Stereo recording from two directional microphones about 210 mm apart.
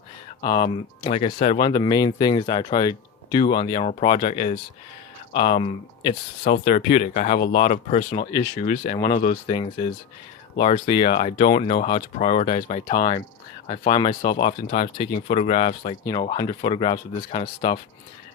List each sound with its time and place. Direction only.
0.4 s speech: 20° left (ahead or behind); by 9.6 s 35° left (ahead or behind)
9.6 s speech: 25° left (ahead or behind)